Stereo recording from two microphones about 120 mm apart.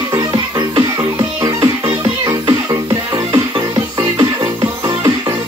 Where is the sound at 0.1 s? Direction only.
35° right (ahead or behind).